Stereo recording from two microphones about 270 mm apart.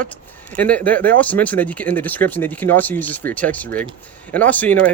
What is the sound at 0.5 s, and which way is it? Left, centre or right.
Speech, centre.